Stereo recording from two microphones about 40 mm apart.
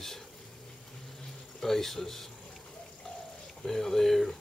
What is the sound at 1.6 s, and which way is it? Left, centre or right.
Speech, centre.